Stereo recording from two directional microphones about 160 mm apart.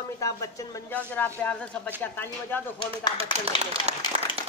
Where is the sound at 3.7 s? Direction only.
40° right (ahead or behind).